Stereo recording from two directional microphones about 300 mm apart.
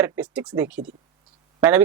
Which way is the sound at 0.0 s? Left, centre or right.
Centre.